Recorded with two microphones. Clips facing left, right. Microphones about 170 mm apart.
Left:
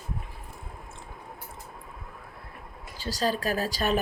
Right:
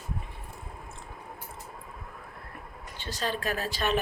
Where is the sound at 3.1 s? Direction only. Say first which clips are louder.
Left 4 dB; 35° left (ahead or behind).